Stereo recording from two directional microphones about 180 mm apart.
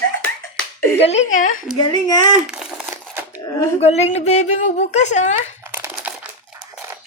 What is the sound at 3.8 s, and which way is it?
A woman's voice, 35° left (ahead or behind).